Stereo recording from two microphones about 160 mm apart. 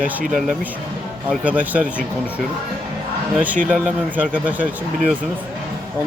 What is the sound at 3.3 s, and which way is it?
Speech, 10° right (ahead or behind).